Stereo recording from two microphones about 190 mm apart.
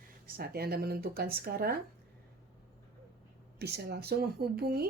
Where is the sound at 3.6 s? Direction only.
60° right (ahead or behind).